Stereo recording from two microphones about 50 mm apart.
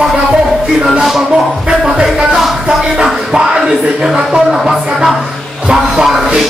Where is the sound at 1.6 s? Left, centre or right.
Centre.